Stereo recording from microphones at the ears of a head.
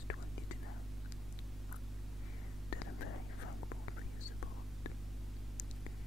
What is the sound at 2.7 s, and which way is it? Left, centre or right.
Whispering, left.